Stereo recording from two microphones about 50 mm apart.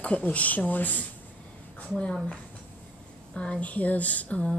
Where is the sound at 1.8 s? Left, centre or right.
Left.